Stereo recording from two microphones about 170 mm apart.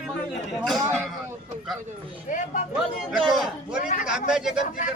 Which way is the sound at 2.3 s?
50° left (ahead or behind).